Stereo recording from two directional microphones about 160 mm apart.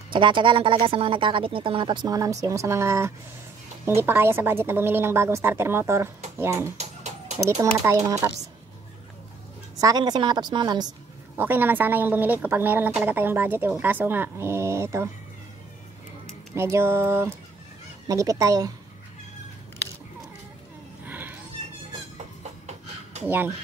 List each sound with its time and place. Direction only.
0.1 s a woman's voice: 30° right (ahead or behind); by 6.7 s 15° right (ahead or behind)
6.8 s chicken: 45° right (ahead or behind)
7.8 s a woman's voice: 20° right (ahead or behind)
9.8 s a woman's voice: 25° right (ahead or behind)
11.3 s a woman's voice: 15° right (ahead or behind)
16.5 s a woman's voice: 15° right (ahead or behind)
21.0 s a sound: 10° right (ahead or behind)
23.2 s a woman's voice: 10° right (ahead or behind)